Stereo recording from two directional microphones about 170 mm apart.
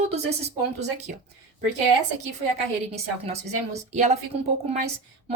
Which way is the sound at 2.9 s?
40° right (ahead or behind).